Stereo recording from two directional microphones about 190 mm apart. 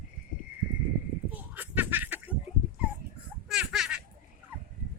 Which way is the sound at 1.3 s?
10° right (ahead or behind).